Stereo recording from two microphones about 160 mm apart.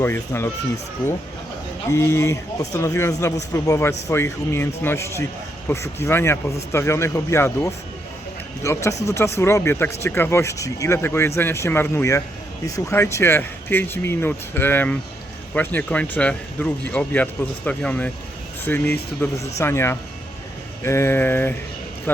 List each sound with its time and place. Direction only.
0.0 s speech: 15° left (ahead or behind)
1.9 s speech: 15° left (ahead or behind)